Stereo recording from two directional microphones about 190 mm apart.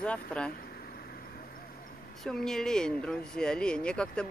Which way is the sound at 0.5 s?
50° left (ahead or behind).